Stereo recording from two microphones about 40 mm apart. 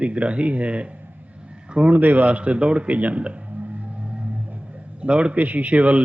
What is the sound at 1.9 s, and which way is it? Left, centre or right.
A man's voice, right.